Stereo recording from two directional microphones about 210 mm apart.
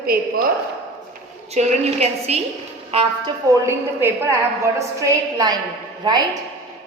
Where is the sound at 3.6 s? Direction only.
15° right (ahead or behind).